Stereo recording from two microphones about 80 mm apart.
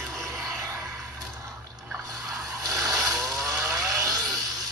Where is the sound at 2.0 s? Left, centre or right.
Right.